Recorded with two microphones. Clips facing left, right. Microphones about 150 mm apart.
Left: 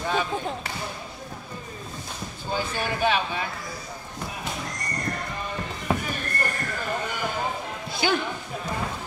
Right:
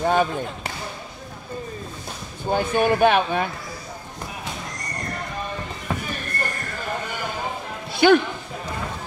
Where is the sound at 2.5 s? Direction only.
55° right (ahead or behind).